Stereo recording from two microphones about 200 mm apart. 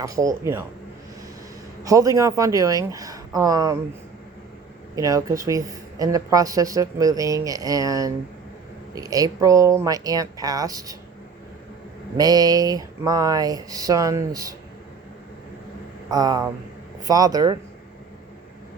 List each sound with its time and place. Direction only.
0.0 s speech: 15° right (ahead or behind)
1.8 s speech: 15° right (ahead or behind)
4.9 s speech: 15° right (ahead or behind)
12.1 s speech: 20° right (ahead or behind)
16.0 s speech: 20° right (ahead or behind)